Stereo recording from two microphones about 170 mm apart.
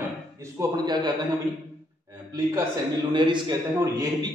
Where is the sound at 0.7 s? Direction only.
25° right (ahead or behind).